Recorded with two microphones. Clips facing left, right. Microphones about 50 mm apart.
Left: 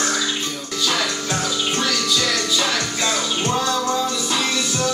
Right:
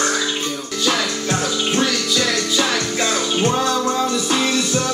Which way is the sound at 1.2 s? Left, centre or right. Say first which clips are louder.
Right 2 dB; centre.